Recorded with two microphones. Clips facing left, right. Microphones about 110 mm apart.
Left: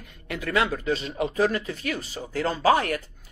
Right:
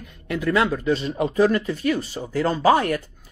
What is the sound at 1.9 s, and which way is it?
Speech, 20° right (ahead or behind).